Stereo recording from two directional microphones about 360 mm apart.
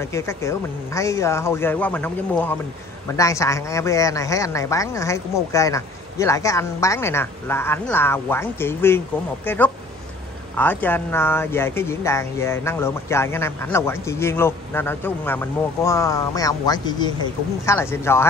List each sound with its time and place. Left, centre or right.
0.0 s speech: centre